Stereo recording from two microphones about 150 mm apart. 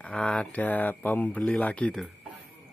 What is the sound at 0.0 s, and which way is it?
Speech, 5° left (ahead or behind).